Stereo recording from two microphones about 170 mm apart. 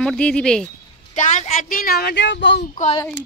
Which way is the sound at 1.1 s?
45° left (ahead or behind).